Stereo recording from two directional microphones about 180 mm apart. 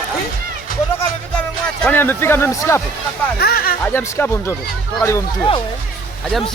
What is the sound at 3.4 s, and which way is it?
Speech, 55° left (ahead or behind).